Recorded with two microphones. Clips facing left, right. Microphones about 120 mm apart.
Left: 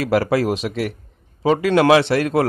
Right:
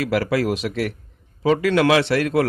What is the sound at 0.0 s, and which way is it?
A man's voice, 35° left (ahead or behind).